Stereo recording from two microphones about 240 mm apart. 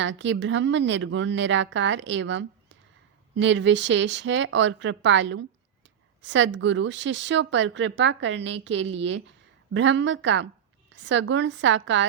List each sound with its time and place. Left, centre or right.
0.0 s speech: right